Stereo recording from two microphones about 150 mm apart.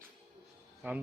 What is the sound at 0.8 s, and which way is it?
Speech, 10° right (ahead or behind).